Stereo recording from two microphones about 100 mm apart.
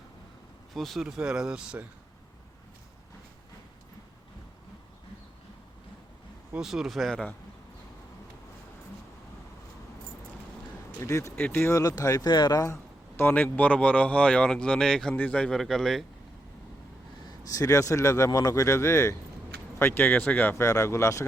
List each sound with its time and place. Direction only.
0.7 s speech: centre (ahead or behind)
6.6 s speech: 5° right (ahead or behind)
11.0 s speech: 30° left (ahead or behind)
11.3 s speech: 20° left (ahead or behind)
11.7 s speech: 35° left (ahead or behind); by 16.0 s centre (ahead or behind)
17.2 s speech: 35° left (ahead or behind)